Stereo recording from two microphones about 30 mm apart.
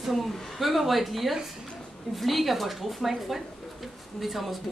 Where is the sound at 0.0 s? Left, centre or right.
Centre.